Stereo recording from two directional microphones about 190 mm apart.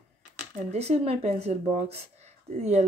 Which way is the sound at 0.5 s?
35° right (ahead or behind).